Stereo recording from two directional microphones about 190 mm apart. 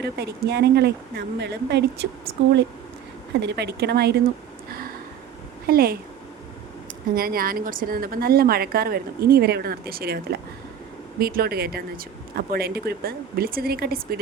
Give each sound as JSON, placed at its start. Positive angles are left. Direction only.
{"t": 0.0, "sound": "speech", "side_deg": -60}
{"t": 3.4, "sound": "speech", "side_deg": -60}
{"t": 5.6, "sound": "a woman's voice", "side_deg": -50}
{"t": 7.2, "sound": "a woman's voice", "side_deg": -50}